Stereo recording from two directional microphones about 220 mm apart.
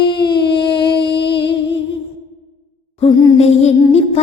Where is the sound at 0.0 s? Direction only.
20° left (ahead or behind).